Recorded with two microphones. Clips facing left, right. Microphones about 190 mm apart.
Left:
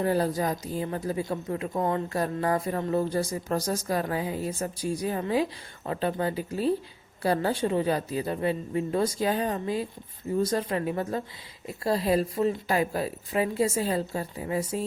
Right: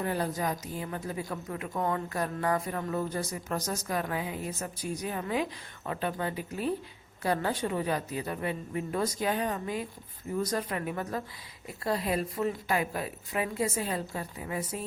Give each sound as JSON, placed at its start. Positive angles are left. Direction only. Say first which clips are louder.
{"t": 0.0, "sound": "a woman's voice", "louder": "left 5 dB", "side_deg": 35}